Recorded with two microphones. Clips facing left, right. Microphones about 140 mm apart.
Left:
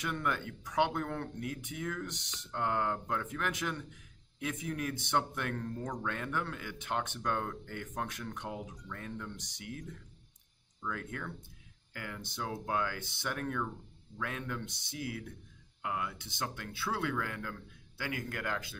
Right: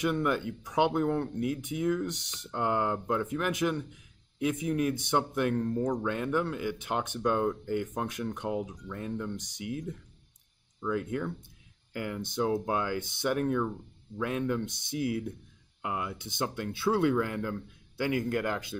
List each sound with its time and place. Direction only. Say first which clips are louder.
0.0 s speech: right 7 dB; 15° right (ahead or behind)